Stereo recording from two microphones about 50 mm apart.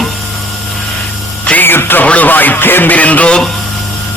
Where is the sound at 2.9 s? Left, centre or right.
Left.